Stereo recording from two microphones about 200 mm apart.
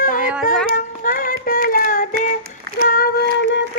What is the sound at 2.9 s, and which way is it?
Female singing, 50° left (ahead or behind).